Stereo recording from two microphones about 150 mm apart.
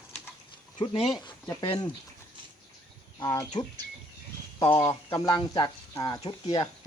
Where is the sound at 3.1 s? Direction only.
25° left (ahead or behind).